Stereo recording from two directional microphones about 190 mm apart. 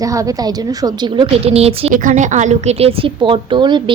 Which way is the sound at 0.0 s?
15° right (ahead or behind).